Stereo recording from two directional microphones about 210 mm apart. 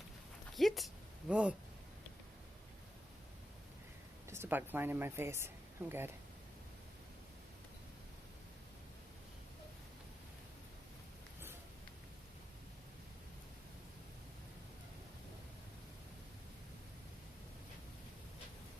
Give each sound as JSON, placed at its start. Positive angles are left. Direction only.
{"t": 0.5, "sound": "speech", "side_deg": 0}
{"t": 4.3, "sound": "speech", "side_deg": -10}